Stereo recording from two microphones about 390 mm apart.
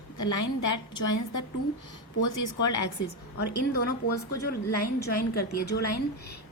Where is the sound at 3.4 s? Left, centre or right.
Left.